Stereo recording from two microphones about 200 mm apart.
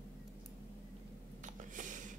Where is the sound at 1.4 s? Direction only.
40° right (ahead or behind).